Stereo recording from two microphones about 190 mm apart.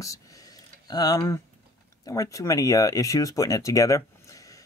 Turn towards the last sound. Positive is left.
turn(degrees=15)  # may be behind; listen again after turning